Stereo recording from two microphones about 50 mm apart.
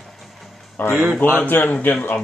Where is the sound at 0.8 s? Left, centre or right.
Left.